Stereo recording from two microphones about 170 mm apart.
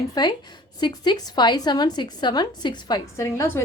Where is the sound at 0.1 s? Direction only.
25° left (ahead or behind).